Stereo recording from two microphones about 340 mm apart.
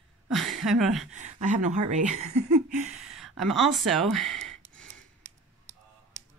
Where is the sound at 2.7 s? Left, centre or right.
Right.